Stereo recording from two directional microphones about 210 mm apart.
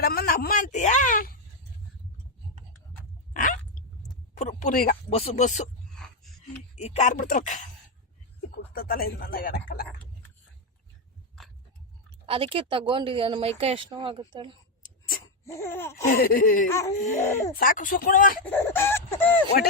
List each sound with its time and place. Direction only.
0.0 s a sound: 45° left (ahead or behind)
3.3 s chewing: 40° left (ahead or behind)
4.4 s speech: 35° left (ahead or behind)
5.0 s speech: 30° left (ahead or behind)
6.8 s speech: 35° left (ahead or behind)
12.2 s speech: 25° right (ahead or behind)
15.4 s speech: 10° left (ahead or behind)
16.0 s speech: 45° left (ahead or behind)
16.6 s speech: 15° left (ahead or behind)
17.6 s speech: 40° left (ahead or behind)
18.5 s speech: 10° left (ahead or behind)